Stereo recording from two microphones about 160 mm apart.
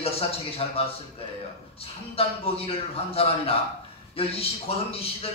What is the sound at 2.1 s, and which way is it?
A man's voice, 35° left (ahead or behind).